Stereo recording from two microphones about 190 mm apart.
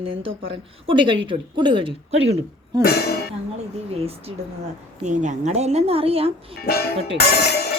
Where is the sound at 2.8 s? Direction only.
55° left (ahead or behind).